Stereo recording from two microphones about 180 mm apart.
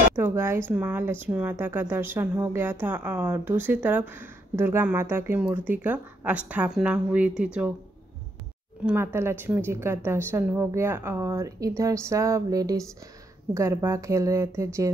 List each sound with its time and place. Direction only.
0.1 s a woman's voice: 15° right (ahead or behind)
8.8 s a woman's voice: 15° right (ahead or behind)